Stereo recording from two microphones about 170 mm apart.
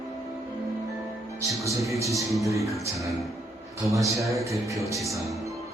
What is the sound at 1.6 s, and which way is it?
Speech, 20° right (ahead or behind).